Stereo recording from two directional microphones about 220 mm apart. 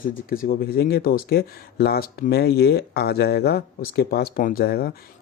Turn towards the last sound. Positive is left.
turn(degrees=45)  # may be behind; listen again after turning